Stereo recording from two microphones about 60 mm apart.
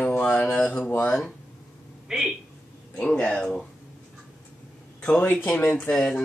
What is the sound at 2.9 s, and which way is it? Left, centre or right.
Speech, centre.